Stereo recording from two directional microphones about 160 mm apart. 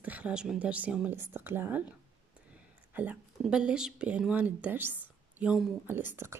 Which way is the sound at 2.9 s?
10° right (ahead or behind).